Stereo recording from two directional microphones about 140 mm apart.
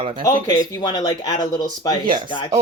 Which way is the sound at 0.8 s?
30° left (ahead or behind).